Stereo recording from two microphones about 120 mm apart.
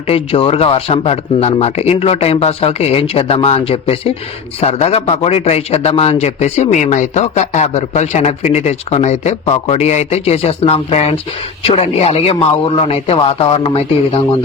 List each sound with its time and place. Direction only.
0.1 s a man's voice: 50° left (ahead or behind)